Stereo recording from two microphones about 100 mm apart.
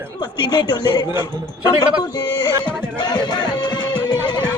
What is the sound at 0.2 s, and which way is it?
Speech, 45° left (ahead or behind).